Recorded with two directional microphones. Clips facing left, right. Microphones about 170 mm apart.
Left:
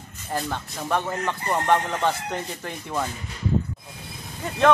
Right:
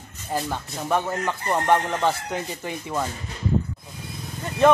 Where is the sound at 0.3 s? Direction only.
10° right (ahead or behind).